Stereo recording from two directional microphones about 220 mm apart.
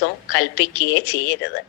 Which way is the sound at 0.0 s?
50° left (ahead or behind).